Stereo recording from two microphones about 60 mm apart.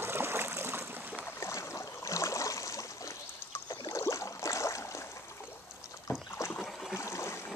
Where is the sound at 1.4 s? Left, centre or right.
Left.